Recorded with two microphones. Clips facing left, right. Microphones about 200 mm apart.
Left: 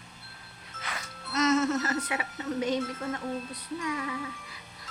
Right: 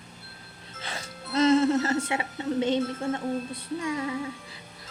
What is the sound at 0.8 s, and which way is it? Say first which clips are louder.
Music: right 2 dB; 30° right (ahead or behind).